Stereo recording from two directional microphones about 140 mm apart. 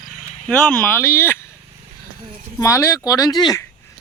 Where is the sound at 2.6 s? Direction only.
20° left (ahead or behind).